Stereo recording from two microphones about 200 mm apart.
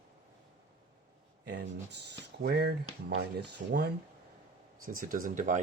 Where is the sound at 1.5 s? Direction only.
55° right (ahead or behind).